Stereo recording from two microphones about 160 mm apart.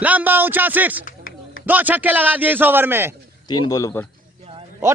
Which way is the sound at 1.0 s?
60° left (ahead or behind).